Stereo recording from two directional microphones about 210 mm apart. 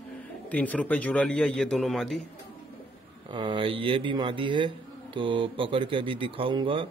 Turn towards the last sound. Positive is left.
turn(degrees=-25)  # may be behind; listen again after turning